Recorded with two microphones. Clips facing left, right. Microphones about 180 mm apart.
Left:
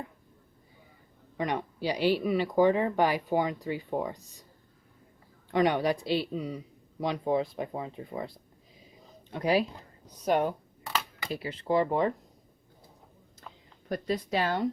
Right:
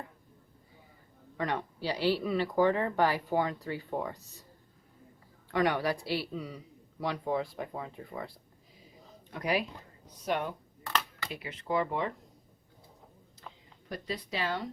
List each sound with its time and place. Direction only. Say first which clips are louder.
1.4 s speech: left 2 dB; 15° left (ahead or behind)
5.5 s speech: left 3 dB; 20° left (ahead or behind)
9.3 s speech: left 5 dB; 30° left (ahead or behind)
10.2 s speech: left 6 dB; 40° left (ahead or behind)
10.8 s a sound: even; 10° left (ahead or behind)
11.3 s speech: left 6 dB; 35° left (ahead or behind)
13.9 s speech: left 7 dB; 50° left (ahead or behind)